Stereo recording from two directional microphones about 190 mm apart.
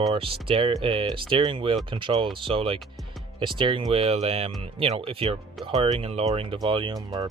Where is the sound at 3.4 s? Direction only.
25° right (ahead or behind).